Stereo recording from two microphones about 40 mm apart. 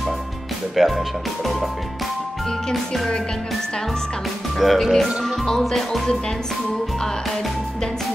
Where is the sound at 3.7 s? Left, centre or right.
Centre.